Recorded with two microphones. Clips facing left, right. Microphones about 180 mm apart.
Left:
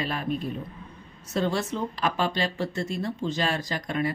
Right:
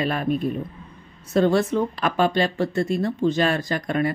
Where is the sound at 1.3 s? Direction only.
55° right (ahead or behind).